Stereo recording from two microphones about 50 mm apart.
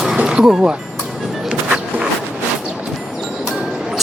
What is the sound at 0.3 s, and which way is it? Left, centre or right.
Speech, centre.